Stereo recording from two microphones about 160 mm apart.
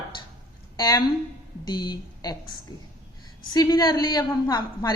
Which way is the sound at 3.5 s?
25° left (ahead or behind).